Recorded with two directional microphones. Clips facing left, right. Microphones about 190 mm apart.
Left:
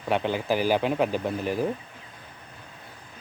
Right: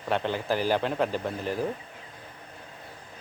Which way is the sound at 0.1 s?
10° left (ahead or behind).